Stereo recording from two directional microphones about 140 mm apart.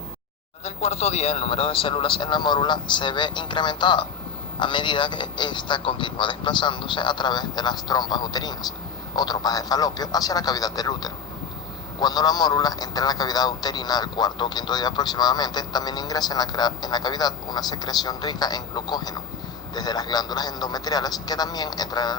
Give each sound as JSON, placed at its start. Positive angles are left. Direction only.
{"t": 0.6, "sound": "a man's voice", "side_deg": 50}